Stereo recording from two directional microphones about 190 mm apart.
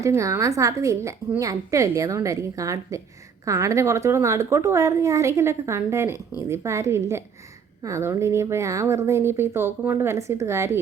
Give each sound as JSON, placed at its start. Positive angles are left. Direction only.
{"t": 0.0, "sound": "a woman's voice", "side_deg": -15}